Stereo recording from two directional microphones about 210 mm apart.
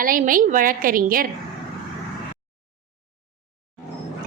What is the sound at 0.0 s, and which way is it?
A woman's voice, 40° right (ahead or behind).